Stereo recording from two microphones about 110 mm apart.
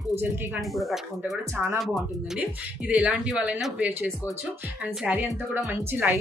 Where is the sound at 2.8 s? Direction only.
10° right (ahead or behind).